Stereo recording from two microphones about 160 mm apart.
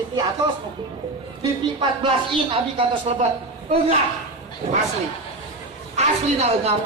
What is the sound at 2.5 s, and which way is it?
Speech, 35° right (ahead or behind).